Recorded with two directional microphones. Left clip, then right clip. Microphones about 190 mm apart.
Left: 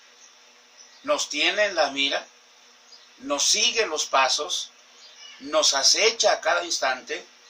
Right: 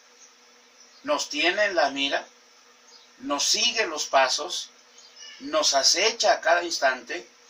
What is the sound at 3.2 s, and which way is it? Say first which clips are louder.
Speech: left 2 dB; 10° left (ahead or behind).